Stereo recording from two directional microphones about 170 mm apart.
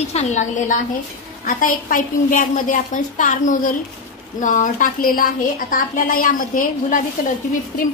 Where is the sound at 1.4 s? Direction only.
55° left (ahead or behind).